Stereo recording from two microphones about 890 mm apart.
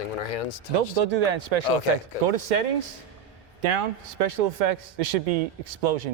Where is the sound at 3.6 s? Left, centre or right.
Right.